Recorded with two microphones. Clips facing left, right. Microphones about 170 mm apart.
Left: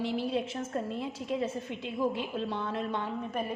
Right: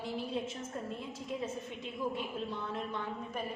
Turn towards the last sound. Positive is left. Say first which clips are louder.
# left 5 dB
turn(degrees=75)  # may be behind; listen again after turning